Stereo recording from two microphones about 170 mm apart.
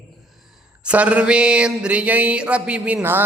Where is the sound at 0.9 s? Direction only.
5° right (ahead or behind).